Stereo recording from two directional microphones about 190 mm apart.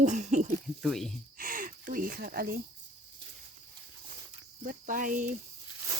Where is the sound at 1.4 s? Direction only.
45° right (ahead or behind).